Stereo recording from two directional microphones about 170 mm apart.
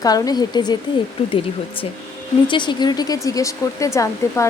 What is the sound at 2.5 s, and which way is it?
Speech, 25° left (ahead or behind).